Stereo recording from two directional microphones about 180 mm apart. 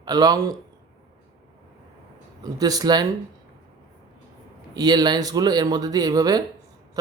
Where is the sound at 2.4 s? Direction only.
20° right (ahead or behind).